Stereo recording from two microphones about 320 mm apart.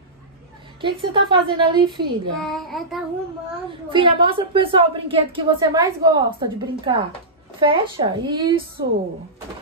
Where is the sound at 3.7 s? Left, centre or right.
Centre.